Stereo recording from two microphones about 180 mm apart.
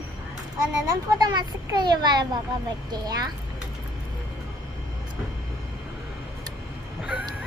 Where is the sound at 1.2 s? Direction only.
25° right (ahead or behind).